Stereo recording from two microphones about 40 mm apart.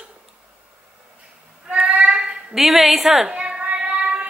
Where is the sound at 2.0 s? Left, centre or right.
Right.